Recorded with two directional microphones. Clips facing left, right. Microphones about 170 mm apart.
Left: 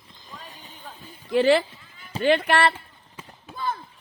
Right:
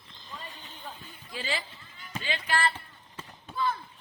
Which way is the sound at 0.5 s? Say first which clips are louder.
Left 2 dB; 10° left (ahead or behind).